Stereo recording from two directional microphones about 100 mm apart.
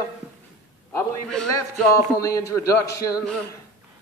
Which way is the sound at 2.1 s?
35° left (ahead or behind).